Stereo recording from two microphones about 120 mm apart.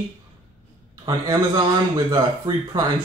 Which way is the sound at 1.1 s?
35° right (ahead or behind).